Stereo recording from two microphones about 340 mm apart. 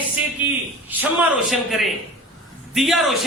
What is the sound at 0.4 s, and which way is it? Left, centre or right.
Speech, centre.